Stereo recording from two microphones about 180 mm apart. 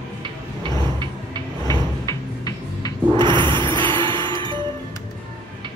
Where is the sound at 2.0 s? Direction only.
20° left (ahead or behind).